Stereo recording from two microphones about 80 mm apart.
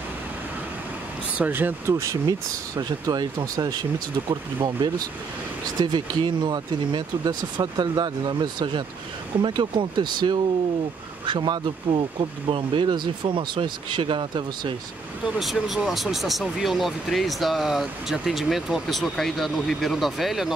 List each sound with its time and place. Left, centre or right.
1.4 s speech: right
2.2 s speech: right
9.4 s speech: right
15.2 s speech: centre